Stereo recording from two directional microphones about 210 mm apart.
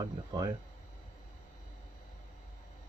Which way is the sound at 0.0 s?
20° right (ahead or behind).